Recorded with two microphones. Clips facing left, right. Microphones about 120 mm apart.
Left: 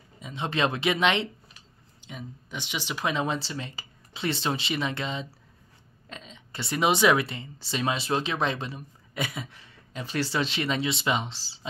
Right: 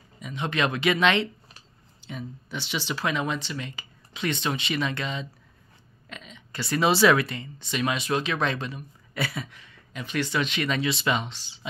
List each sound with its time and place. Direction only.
0.2 s speech: 25° left (ahead or behind)
9.6 s speech: 35° left (ahead or behind)